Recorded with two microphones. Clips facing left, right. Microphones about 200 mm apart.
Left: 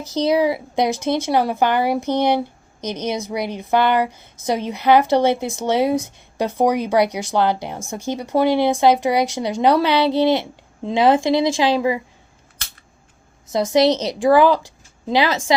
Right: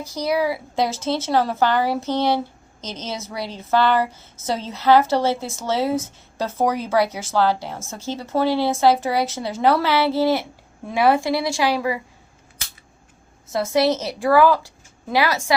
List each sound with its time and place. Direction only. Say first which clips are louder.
0.1 s a woman's voice: left 5 dB; 20° left (ahead or behind)
13.5 s a woman's voice: left 3 dB; 20° left (ahead or behind)